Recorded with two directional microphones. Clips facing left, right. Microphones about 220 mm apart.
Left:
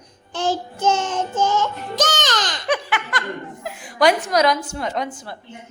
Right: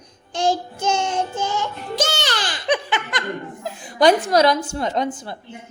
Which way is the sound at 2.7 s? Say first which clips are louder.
Right 1 dB; 20° right (ahead or behind).